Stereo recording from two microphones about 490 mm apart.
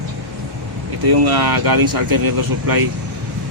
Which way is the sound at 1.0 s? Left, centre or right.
Right.